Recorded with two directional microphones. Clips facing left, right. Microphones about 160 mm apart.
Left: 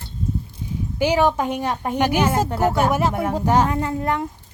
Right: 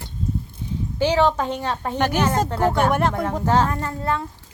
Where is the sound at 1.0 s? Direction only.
10° left (ahead or behind).